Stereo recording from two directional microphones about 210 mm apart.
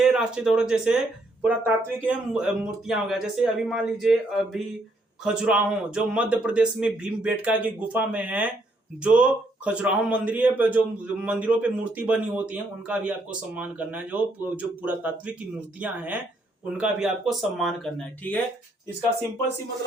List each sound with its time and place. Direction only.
0.0 s a man's voice: 5° right (ahead or behind)